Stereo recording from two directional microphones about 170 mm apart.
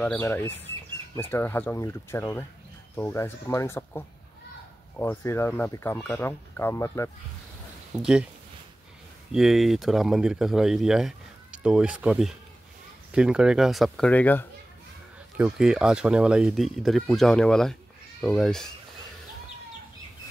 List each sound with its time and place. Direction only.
0.0 s speech: 10° left (ahead or behind)
8.0 s speech: 5° right (ahead or behind)
9.3 s speech: centre (ahead or behind)
15.3 s speech: 5° right (ahead or behind)